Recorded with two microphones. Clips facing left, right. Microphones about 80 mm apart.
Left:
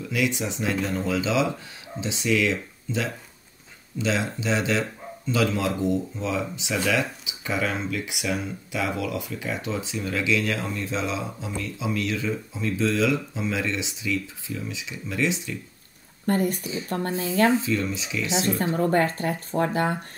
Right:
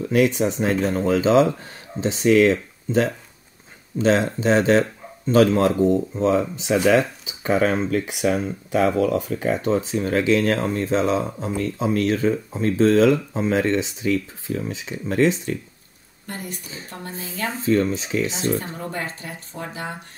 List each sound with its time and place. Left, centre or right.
0.0 s speech: right
16.3 s speech: left
17.6 s speech: right
18.8 s speech: left